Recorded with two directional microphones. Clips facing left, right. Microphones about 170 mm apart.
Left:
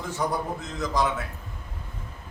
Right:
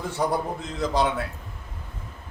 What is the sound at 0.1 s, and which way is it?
Speech, 35° right (ahead or behind).